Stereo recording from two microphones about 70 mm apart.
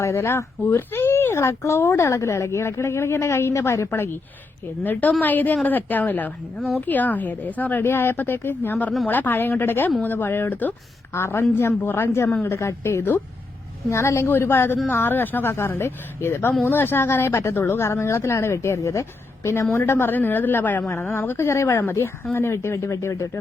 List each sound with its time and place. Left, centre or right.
0.0 s a woman's voice: left
11.1 s speech: left
13.9 s a woman's voice: left